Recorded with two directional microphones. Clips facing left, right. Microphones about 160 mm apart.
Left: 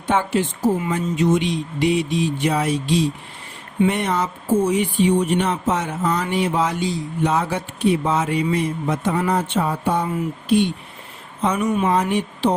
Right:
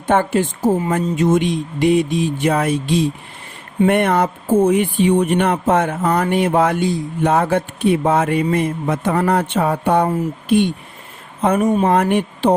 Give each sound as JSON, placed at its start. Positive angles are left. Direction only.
{"t": 0.1, "sound": "speech", "side_deg": -50}
{"t": 10.1, "sound": "speech", "side_deg": -50}
{"t": 11.9, "sound": "speech", "side_deg": -60}